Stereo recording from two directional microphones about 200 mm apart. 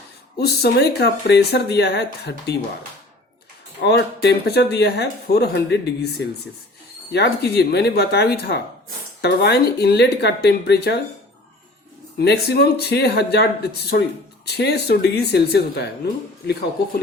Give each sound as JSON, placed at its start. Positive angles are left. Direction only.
{"t": 0.3, "sound": "speech", "side_deg": 55}
{"t": 3.8, "sound": "speech", "side_deg": 55}
{"t": 12.2, "sound": "speech", "side_deg": 55}